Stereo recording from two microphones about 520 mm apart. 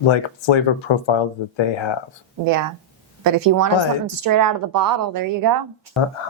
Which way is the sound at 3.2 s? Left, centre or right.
Right.